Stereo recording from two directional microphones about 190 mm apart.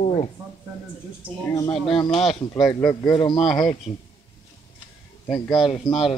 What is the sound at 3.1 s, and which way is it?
Speech, 25° left (ahead or behind).